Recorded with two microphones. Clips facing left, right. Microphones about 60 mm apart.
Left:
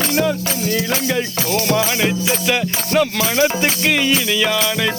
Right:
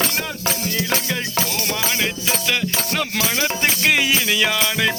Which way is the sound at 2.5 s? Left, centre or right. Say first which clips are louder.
Left 4 dB; centre.